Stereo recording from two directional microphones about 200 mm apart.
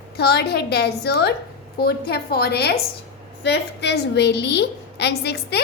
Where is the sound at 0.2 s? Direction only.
55° left (ahead or behind).